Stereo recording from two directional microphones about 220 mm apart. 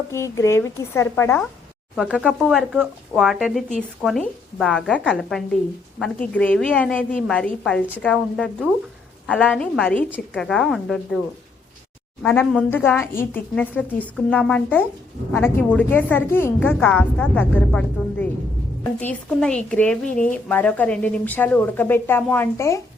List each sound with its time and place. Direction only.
0.1 s speech: 10° left (ahead or behind)
2.0 s a woman's voice: 5° right (ahead or behind)
12.2 s speech: 10° left (ahead or behind)